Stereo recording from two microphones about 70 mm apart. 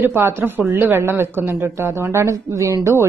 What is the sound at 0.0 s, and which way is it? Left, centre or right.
Speech, right.